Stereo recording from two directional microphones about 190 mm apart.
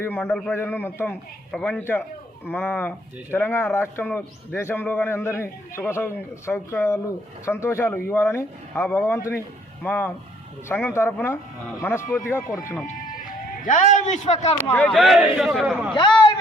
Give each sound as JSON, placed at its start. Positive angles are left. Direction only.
{"t": 0.0, "sound": "a man's voice", "side_deg": 10}
{"t": 13.7, "sound": "a man's voice", "side_deg": 40}
{"t": 14.7, "sound": "a man's voice", "side_deg": 10}
{"t": 14.9, "sound": "a man's voice", "side_deg": 0}
{"t": 16.0, "sound": "a man's voice", "side_deg": 25}